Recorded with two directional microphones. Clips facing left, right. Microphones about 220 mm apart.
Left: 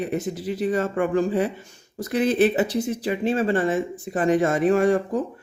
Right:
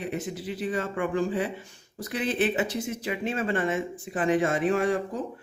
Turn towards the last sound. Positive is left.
turn(degrees=45)  # may be behind; listen again after turning